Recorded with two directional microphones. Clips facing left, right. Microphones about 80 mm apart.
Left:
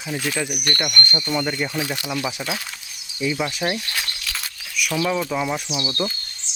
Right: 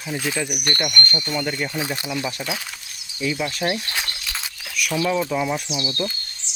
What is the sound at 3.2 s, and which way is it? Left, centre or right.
Speech, centre.